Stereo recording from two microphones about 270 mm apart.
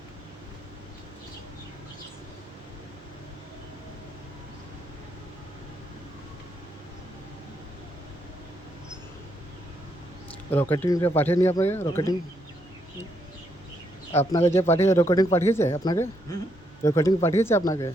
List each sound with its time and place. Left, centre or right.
10.5 s speech: centre
14.1 s speech: left
14.7 s speech: centre